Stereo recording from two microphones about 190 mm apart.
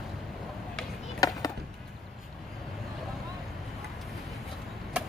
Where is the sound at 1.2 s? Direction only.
20° left (ahead or behind).